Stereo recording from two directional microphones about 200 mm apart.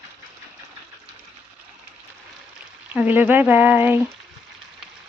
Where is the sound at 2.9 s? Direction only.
5° right (ahead or behind).